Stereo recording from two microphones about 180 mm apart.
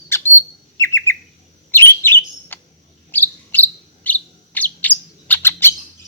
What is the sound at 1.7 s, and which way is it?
Chirp, 10° left (ahead or behind).